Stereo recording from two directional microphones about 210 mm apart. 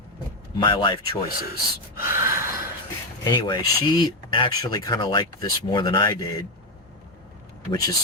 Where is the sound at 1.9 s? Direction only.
10° right (ahead or behind).